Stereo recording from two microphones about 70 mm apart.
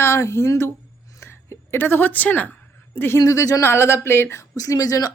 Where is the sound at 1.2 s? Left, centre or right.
Left.